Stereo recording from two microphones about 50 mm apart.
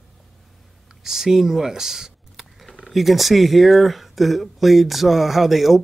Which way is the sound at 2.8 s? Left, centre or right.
Centre.